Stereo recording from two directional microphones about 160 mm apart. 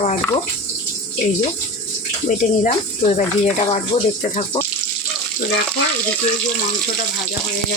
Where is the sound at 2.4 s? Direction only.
50° left (ahead or behind).